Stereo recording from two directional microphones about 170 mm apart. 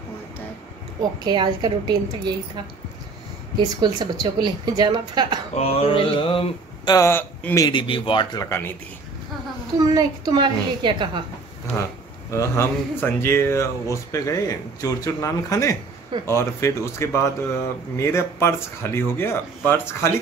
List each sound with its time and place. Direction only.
1.2 s a woman's voice: 25° right (ahead or behind)
5.5 s mantra: 35° left (ahead or behind)
7.1 s speech: 15° left (ahead or behind)
7.6 s speech: 30° left (ahead or behind)
8.5 s speech: 15° left (ahead or behind)
9.9 s a woman's voice: 25° right (ahead or behind)
12.3 s speech: 15° left (ahead or behind)